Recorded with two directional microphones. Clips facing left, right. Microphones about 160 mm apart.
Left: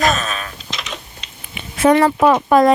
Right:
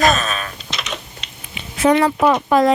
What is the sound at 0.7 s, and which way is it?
Typing, 70° right (ahead or behind).